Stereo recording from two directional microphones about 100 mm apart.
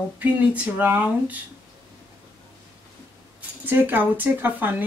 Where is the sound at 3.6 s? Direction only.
20° right (ahead or behind).